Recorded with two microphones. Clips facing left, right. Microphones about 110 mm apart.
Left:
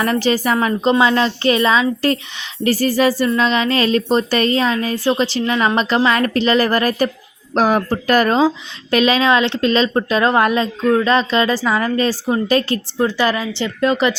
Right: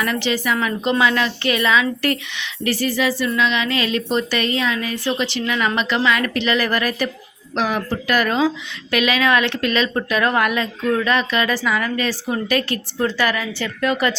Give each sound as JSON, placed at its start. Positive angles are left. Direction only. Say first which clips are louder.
{"t": 0.0, "sound": "speech", "louder": "left 5 dB", "side_deg": 40}